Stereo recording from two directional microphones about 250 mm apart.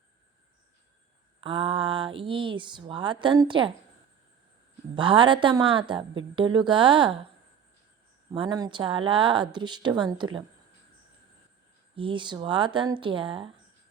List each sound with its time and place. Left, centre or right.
1.4 s speech: right
4.9 s speech: centre
8.3 s speech: centre
11.9 s speech: centre